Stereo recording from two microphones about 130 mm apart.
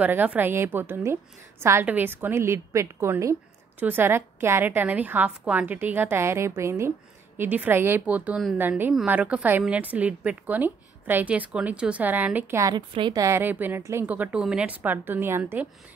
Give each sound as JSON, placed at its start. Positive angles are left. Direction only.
{"t": 0.0, "sound": "a woman's voice", "side_deg": -10}
{"t": 12.7, "sound": "a woman's voice", "side_deg": -35}
{"t": 13.2, "sound": "a woman's voice", "side_deg": -20}